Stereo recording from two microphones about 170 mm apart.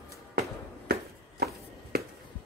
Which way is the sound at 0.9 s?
70° right (ahead or behind).